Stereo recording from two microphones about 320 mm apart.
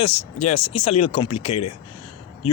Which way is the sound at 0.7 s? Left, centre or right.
Centre.